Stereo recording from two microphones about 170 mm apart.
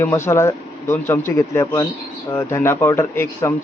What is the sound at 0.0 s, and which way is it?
Speech, 15° left (ahead or behind).